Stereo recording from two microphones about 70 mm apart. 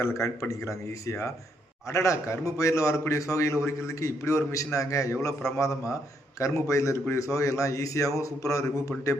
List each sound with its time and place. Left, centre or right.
0.0 s a man's voice: left